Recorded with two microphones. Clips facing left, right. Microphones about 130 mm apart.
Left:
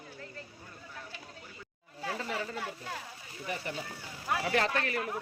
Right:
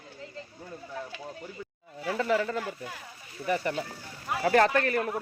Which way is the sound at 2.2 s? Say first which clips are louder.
Right 12 dB; 80° right.